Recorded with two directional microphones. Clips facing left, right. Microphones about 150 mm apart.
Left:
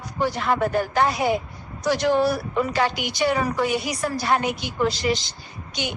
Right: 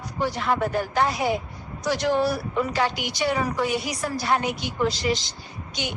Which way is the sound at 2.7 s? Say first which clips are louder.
Left 2 dB; 60° left (ahead or behind).